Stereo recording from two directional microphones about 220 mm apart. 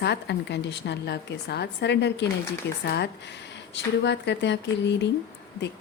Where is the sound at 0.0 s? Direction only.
50° left (ahead or behind).